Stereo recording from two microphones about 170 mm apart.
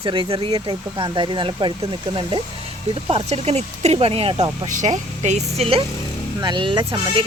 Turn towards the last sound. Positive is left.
turn(degrees=-30)  # may be behind; listen again after turning